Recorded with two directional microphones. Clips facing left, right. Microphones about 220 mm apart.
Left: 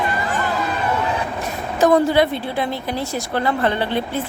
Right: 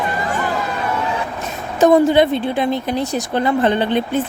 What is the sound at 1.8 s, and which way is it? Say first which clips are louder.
A woman's voice: right 3 dB; 20° right (ahead or behind).